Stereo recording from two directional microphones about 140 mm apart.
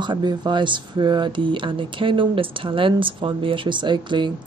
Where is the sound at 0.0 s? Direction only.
30° right (ahead or behind).